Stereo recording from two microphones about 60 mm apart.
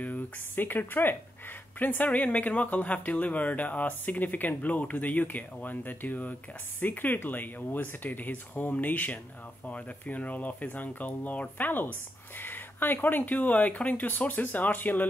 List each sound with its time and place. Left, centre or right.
0.0 s speech: left